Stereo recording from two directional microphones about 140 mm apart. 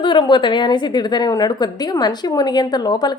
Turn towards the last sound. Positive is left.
turn(degrees=30)  # may be behind; listen again after turning